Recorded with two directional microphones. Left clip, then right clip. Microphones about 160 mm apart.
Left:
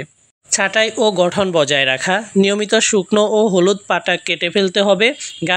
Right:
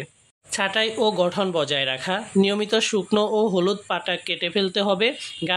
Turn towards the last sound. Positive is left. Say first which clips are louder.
# left 7 dB
turn(degrees=30)  # may be behind; listen again after turning